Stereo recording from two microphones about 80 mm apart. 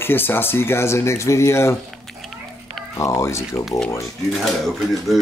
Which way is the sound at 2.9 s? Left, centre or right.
Left.